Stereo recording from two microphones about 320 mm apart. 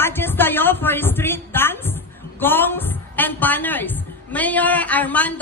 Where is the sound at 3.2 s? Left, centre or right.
Centre.